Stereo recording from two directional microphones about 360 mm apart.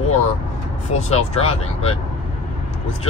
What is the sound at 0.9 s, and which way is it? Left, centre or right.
Speech, centre.